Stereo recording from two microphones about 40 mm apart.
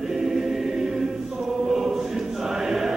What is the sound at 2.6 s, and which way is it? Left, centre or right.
Chant, centre.